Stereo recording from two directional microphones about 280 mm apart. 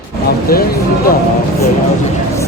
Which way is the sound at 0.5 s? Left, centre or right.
Left.